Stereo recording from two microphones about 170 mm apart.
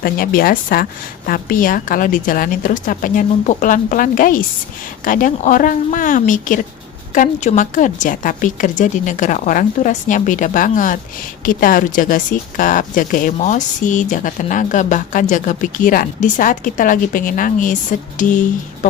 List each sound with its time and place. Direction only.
0.0 s a woman's voice: 60° left (ahead or behind)